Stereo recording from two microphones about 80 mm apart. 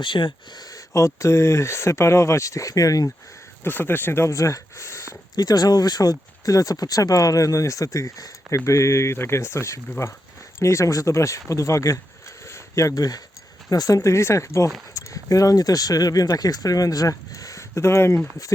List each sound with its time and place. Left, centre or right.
0.0 s speech: left
0.7 s speech: left
3.6 s speech: left
5.3 s speech: left
12.5 s a sound: left
13.7 s speech: left